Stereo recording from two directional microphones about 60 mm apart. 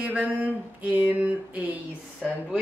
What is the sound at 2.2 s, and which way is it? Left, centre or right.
Speech, centre.